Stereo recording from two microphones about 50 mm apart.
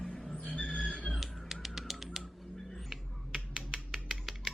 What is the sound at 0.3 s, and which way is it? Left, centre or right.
Vehicle, left.